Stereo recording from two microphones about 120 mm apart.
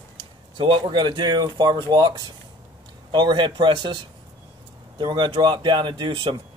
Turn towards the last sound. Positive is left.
turn(degrees=-40)  # may be behind; listen again after turning